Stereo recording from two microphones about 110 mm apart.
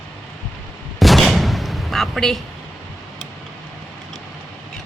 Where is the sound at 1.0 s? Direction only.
Centre (ahead or behind).